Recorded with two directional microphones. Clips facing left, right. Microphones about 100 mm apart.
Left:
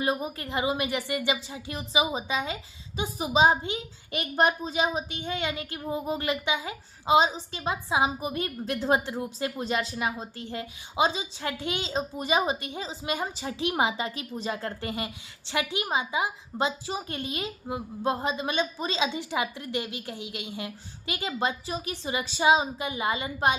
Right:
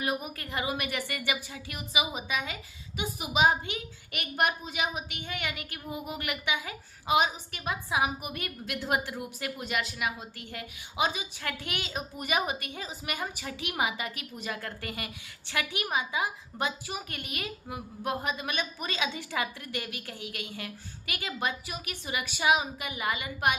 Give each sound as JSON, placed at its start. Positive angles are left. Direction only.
{"t": 0.0, "sound": "a woman's voice", "side_deg": 25}